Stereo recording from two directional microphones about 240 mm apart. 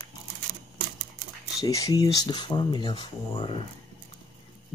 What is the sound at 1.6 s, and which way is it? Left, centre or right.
Speech, centre.